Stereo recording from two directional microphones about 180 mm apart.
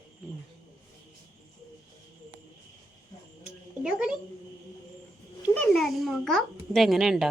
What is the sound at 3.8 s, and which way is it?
Speech, 5° right (ahead or behind).